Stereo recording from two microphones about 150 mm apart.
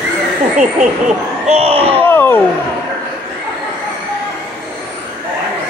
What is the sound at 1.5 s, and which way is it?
Speech, 40° right (ahead or behind).